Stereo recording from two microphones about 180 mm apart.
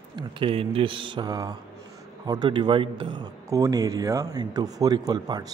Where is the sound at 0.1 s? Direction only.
30° right (ahead or behind).